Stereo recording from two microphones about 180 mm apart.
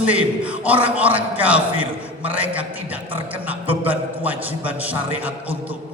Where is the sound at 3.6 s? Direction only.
30° right (ahead or behind).